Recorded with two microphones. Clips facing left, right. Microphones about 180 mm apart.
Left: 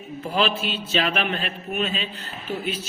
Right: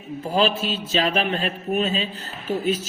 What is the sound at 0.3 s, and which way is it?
A woman's voice, 35° right (ahead or behind).